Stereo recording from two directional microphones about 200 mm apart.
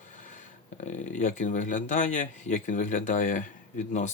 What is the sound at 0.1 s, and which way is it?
Speech, 40° left (ahead or behind).